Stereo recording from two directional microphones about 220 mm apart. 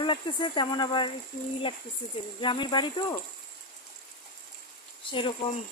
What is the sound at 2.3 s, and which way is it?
Speech, 20° left (ahead or behind).